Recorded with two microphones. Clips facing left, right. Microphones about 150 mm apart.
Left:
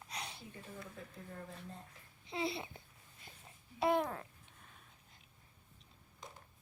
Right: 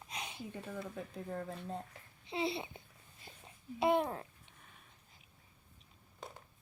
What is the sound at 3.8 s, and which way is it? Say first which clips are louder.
Speech: right 2 dB; 25° right (ahead or behind).